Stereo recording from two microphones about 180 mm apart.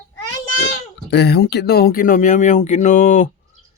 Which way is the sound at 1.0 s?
65° left (ahead or behind).